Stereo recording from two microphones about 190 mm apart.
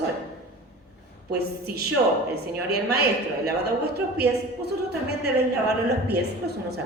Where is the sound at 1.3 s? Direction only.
60° right (ahead or behind).